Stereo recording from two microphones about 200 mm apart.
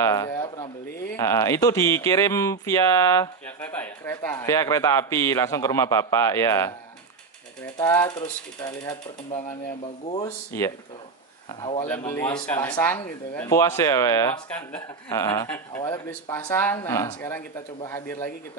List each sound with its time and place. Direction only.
0.0 s a sound: 15° left (ahead or behind)
1.1 s a man's voice: 15° left (ahead or behind)
7.7 s a man's voice: 10° left (ahead or behind)
11.8 s a man's voice: 10° left (ahead or behind)
15.0 s a man's voice: 20° left (ahead or behind)